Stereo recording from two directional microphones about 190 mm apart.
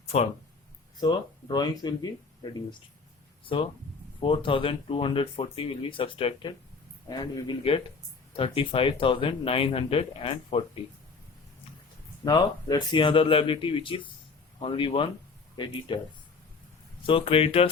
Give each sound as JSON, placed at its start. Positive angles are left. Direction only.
{"t": 0.9, "sound": "speech", "side_deg": 20}
{"t": 12.2, "sound": "speech", "side_deg": 20}
{"t": 17.1, "sound": "speech", "side_deg": 30}